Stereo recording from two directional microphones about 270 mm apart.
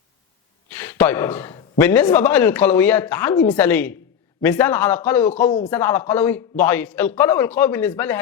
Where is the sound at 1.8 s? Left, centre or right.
Centre.